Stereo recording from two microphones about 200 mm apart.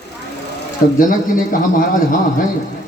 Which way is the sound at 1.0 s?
40° left (ahead or behind).